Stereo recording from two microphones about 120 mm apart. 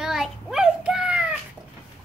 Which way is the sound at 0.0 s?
5° right (ahead or behind).